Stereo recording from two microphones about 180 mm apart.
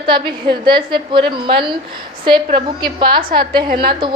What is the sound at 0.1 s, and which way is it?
A woman's voice, 25° right (ahead or behind).